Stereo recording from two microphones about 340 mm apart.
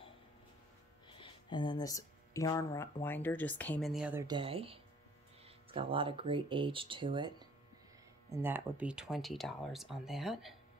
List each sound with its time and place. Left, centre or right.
1.0 s speech: centre